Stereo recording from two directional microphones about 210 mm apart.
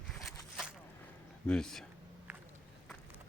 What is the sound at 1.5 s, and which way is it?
Speech, centre (ahead or behind).